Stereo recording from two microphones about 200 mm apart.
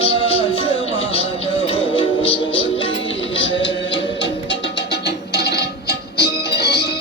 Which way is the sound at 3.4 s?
65° left (ahead or behind).